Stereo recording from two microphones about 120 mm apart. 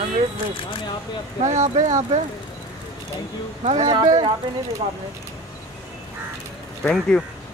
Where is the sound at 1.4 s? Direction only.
80° right.